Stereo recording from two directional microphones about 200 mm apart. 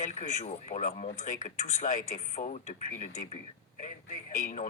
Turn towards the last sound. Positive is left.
turn(degrees=40)  # may be behind; listen again after turning